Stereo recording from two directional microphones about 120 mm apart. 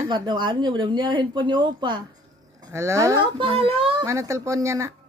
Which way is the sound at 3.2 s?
50° right (ahead or behind).